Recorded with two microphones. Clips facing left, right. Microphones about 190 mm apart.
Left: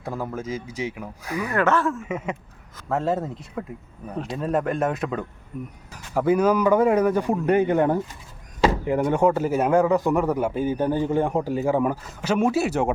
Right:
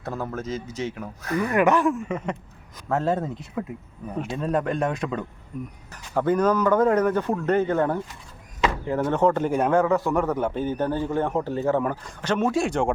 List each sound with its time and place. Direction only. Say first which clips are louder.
0.0 s a man's voice: left 1 dB; 10° left (ahead or behind)
1.5 s speech: right 2 dB; 15° right (ahead or behind)
2.0 s a man's voice: even; 5° left (ahead or behind)